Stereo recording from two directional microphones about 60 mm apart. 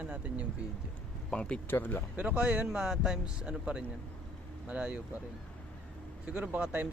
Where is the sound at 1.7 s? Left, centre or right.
Left.